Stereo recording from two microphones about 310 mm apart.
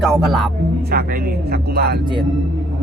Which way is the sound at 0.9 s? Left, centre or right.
Right.